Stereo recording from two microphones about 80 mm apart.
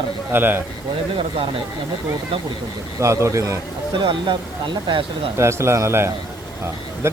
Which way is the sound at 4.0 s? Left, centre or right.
Right.